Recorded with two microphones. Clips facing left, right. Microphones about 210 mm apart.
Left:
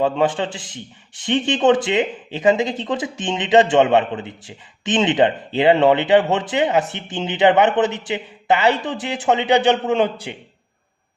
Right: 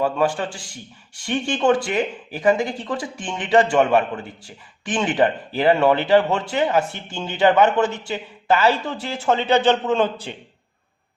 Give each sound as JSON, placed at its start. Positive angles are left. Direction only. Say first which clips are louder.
{"t": 0.0, "sound": "speech", "louder": "left 2 dB", "side_deg": 20}